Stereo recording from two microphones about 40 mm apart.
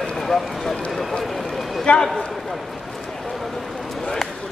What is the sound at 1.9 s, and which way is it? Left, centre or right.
Speech, left.